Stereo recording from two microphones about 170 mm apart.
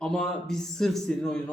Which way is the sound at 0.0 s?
5° left (ahead or behind).